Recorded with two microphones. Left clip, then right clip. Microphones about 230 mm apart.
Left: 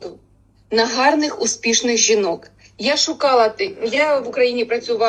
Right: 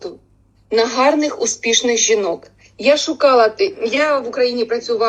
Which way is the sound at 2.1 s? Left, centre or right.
Centre.